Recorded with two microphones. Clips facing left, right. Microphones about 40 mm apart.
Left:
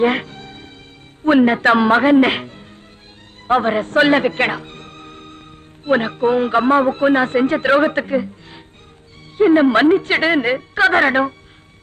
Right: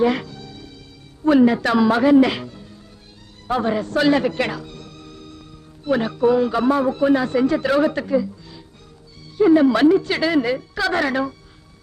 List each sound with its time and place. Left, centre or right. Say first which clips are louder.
0.0 s music: left 2 dB; left
1.2 s a man's voice: left 2 dB; left